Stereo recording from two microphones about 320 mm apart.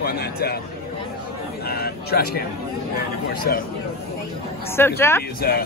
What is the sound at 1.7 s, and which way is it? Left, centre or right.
Speech, left.